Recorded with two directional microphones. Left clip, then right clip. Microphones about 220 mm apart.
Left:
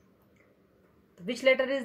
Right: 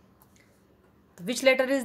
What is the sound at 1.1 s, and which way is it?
Speech, 45° right (ahead or behind).